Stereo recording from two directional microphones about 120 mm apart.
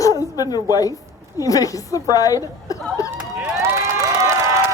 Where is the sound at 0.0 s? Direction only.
35° left (ahead or behind).